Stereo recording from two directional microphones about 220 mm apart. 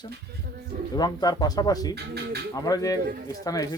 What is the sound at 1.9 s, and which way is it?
Speech, 50° right (ahead or behind).